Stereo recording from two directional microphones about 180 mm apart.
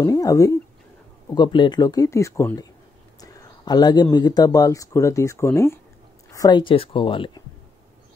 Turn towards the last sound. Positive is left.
turn(degrees=30)  # may be behind; listen again after turning